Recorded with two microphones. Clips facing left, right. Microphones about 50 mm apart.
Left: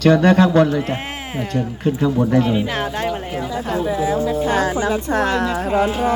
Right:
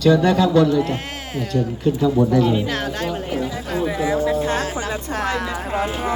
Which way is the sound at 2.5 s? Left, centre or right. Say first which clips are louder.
Left 1 dB; centre.